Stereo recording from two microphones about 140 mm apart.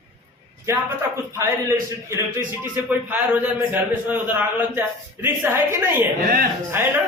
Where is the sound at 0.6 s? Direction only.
20° right (ahead or behind).